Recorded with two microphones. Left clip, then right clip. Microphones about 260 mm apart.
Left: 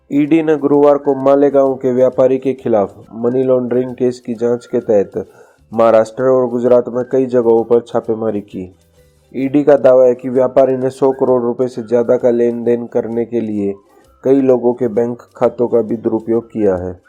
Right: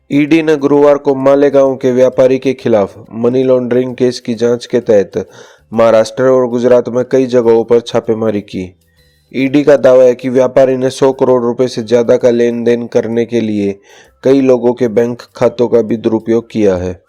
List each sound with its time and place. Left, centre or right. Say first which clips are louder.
0.1 s a man's voice: right 3 dB; right
7.2 s a man's voice: right 2 dB; right